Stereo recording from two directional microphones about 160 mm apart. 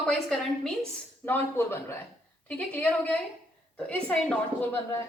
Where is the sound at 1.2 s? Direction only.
15° left (ahead or behind).